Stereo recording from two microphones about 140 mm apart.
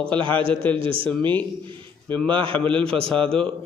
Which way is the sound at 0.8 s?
40° right (ahead or behind).